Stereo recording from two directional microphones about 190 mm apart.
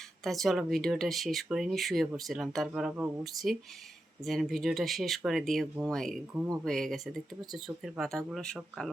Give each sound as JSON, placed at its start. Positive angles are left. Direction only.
{"t": 0.3, "sound": "speech", "side_deg": 0}